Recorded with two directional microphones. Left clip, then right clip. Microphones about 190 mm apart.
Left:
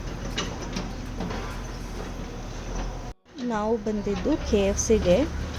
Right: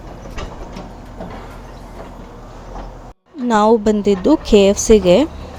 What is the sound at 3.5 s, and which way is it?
Speech, 50° right (ahead or behind).